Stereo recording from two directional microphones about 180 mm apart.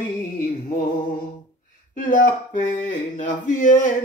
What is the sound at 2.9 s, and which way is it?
Speech, 45° left (ahead or behind).